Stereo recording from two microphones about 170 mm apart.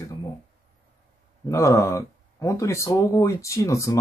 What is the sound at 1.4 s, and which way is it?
Speech, 20° left (ahead or behind).